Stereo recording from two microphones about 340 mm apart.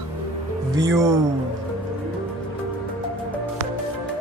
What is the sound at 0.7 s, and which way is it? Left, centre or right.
Speech, centre.